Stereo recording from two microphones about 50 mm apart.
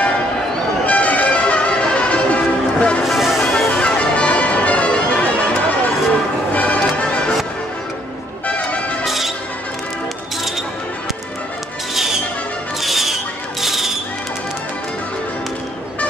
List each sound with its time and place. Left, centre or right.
0.8 s music: left
3.0 s music: centre
3.4 s music: centre
8.5 s music: left
9.0 s music: centre
11.9 s music: centre